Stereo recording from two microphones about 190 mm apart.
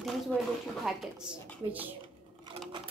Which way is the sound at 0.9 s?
Centre (ahead or behind).